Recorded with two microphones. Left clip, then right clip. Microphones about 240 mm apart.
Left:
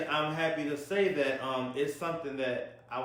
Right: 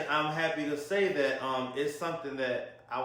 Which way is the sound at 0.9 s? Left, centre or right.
Centre.